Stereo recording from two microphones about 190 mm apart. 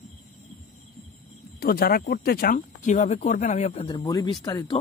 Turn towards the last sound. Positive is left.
turn(degrees=20)  # may be behind; listen again after turning